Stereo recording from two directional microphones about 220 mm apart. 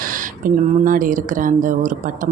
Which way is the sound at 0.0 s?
40° right (ahead or behind).